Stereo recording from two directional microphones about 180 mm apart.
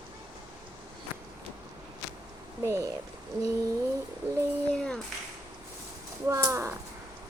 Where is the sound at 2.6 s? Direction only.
15° right (ahead or behind).